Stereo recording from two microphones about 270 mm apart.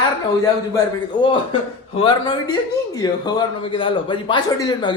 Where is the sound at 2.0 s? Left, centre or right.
Centre.